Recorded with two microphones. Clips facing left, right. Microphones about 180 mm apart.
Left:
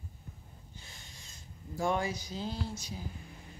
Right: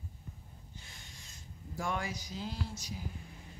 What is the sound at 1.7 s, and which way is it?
Speech, 30° left (ahead or behind).